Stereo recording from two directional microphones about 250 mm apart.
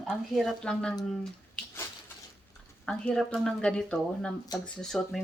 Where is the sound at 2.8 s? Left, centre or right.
Centre.